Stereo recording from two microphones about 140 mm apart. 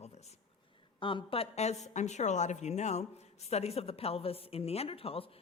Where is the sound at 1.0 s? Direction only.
35° left (ahead or behind).